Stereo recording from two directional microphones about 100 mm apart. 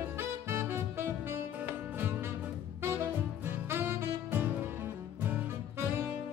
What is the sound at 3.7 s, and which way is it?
Saxophone, 25° right (ahead or behind).